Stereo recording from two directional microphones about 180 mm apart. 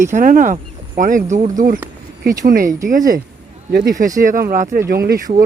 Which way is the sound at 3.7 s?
55° right (ahead or behind).